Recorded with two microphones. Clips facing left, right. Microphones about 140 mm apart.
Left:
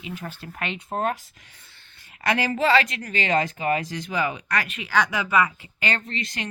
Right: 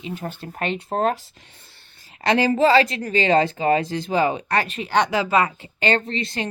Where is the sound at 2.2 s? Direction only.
30° right (ahead or behind).